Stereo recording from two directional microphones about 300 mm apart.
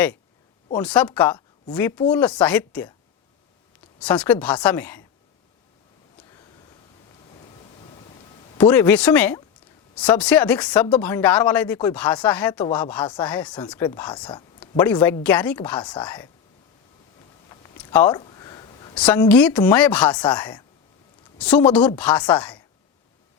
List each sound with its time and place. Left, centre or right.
0.8 s speech: centre
4.0 s speech: centre
8.5 s speech: centre
14.3 s a sound: centre
14.8 s speech: centre
17.5 s a sound: centre
18.9 s speech: centre